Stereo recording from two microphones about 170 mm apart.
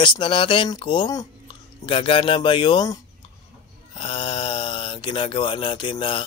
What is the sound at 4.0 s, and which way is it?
Speech, 30° left (ahead or behind).